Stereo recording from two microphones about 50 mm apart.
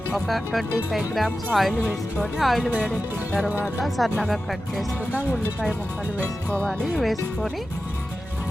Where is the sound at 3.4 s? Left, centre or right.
Right.